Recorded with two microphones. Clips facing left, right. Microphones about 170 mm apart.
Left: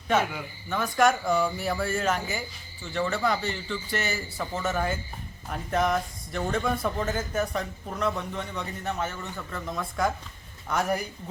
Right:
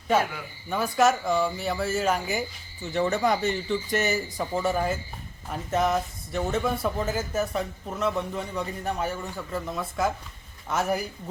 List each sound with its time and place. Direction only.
0.7 s a man's voice: 5° right (ahead or behind)